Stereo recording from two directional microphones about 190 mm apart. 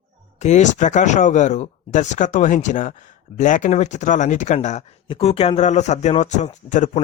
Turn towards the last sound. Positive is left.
turn(degrees=40)  # may be behind; listen again after turning